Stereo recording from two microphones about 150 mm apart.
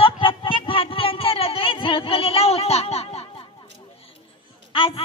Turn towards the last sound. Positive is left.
turn(degrees=40)  # may be behind; listen again after turning